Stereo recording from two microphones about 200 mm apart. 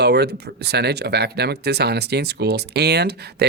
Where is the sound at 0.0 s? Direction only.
55° right (ahead or behind).